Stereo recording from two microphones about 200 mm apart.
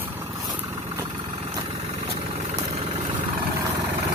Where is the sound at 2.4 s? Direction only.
30° right (ahead or behind).